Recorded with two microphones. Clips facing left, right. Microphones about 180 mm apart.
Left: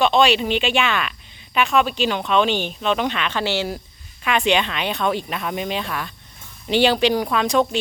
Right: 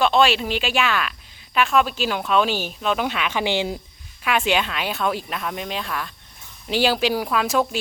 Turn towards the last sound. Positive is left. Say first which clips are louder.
# left 2 dB
turn(degrees=-5)  # may be behind; listen again after turning